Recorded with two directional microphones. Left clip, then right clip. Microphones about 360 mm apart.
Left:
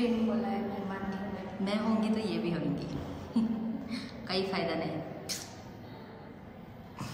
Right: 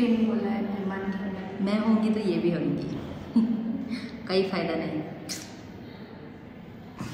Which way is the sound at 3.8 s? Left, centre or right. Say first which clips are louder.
Right 5 dB; centre.